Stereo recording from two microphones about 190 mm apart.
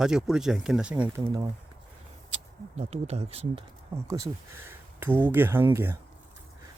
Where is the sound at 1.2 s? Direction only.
20° right (ahead or behind).